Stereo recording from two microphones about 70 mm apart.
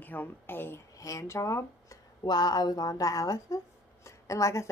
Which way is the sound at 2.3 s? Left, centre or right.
Left.